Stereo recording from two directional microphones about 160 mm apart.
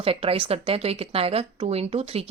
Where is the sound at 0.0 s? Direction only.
35° right (ahead or behind).